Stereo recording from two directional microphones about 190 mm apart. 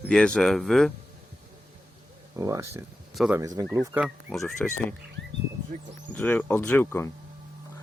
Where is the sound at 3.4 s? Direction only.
20° right (ahead or behind).